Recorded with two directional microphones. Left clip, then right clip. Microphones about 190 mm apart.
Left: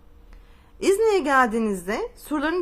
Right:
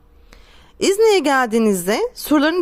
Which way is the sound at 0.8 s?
45° right (ahead or behind).